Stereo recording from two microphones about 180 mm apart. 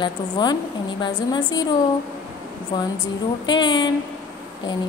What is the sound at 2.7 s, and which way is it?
A woman's voice, 25° left (ahead or behind).